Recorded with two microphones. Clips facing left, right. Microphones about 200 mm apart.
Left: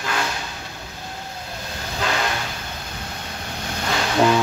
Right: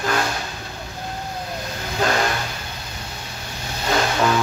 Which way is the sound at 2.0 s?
40° right (ahead or behind).